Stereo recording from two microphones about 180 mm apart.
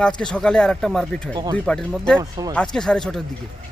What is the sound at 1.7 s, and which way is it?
Speech, 5° left (ahead or behind).